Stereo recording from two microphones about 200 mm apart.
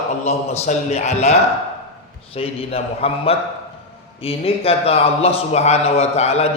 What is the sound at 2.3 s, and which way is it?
A man's voice, 30° left (ahead or behind).